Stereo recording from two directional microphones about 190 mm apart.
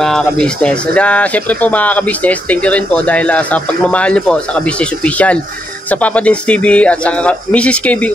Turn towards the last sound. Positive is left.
turn(degrees=5)  # may be behind; listen again after turning